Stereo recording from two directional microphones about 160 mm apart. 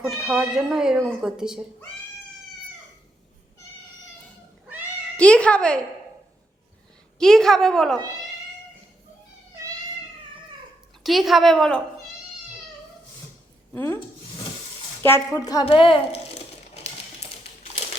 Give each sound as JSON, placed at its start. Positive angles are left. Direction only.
{"t": 0.2, "sound": "a woman's voice", "side_deg": -5}
{"t": 5.1, "sound": "a woman's voice", "side_deg": 5}
{"t": 7.2, "sound": "a woman's voice", "side_deg": 5}
{"t": 11.0, "sound": "a woman's voice", "side_deg": 0}
{"t": 13.7, "sound": "a woman's voice", "side_deg": 15}
{"t": 15.0, "sound": "speech", "side_deg": 15}
{"t": 15.6, "sound": "a woman's voice", "side_deg": 35}